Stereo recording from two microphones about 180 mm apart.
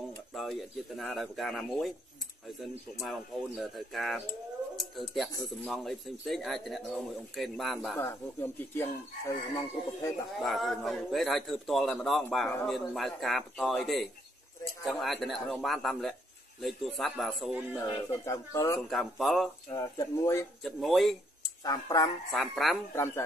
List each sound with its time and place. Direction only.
0.3 s speech: centre (ahead or behind)
3.0 s speech: centre (ahead or behind)
8.0 s speech: 10° left (ahead or behind)
10.4 s speech: centre (ahead or behind)
17.7 s speech: 15° left (ahead or behind)
18.9 s speech: centre (ahead or behind)
19.7 s speech: 15° left (ahead or behind)
20.6 s speech: centre (ahead or behind)
21.6 s speech: 20° left (ahead or behind)
22.3 s speech: centre (ahead or behind)
22.9 s speech: 15° left (ahead or behind)